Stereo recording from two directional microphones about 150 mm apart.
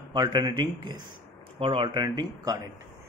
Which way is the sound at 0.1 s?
30° right (ahead or behind).